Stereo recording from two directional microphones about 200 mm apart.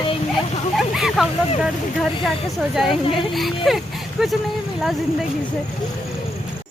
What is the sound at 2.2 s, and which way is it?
Speech, centre (ahead or behind).